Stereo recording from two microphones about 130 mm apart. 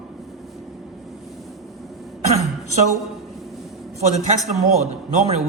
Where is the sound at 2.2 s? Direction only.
55° right (ahead or behind).